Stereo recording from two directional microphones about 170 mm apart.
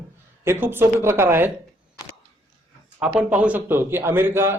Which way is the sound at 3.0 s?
5° right (ahead or behind).